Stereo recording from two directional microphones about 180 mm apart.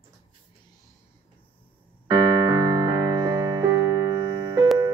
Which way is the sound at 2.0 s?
20° right (ahead or behind).